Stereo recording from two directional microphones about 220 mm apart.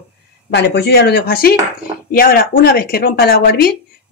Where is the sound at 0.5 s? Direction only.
50° left (ahead or behind).